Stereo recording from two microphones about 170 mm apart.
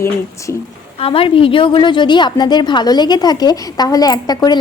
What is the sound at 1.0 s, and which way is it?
A woman's voice, 35° left (ahead or behind).